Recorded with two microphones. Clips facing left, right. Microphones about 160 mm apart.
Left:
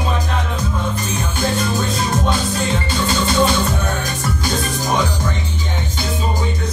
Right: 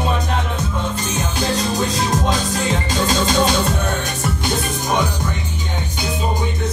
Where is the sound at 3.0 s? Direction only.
90° right.